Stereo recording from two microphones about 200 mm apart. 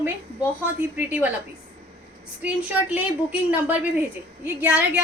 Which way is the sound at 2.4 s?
5° right (ahead or behind).